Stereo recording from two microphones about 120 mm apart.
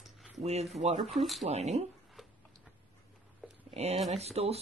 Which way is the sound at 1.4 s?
70° right (ahead or behind).